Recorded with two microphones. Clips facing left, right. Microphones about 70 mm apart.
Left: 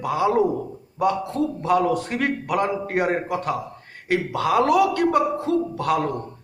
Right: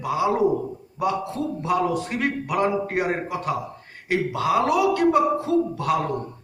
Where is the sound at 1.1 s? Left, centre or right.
Left.